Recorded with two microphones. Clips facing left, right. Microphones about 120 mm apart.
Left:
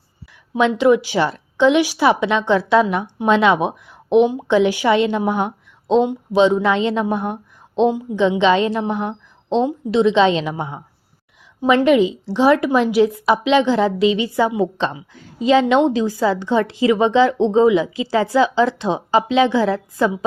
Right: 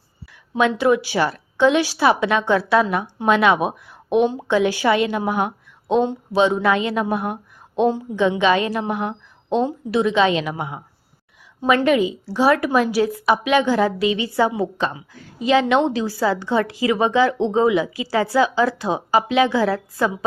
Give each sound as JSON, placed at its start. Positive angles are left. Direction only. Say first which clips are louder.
{"t": 0.5, "sound": "a woman's voice", "louder": "left 3 dB", "side_deg": 20}